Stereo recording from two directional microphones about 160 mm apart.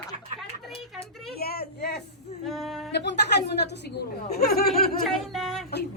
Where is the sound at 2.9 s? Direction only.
90° left.